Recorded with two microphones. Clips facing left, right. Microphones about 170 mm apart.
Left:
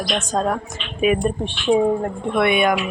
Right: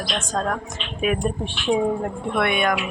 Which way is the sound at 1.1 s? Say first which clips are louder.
Left 3 dB; 5° right (ahead or behind).